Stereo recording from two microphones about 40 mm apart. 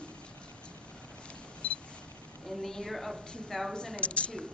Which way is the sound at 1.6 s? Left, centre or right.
Left.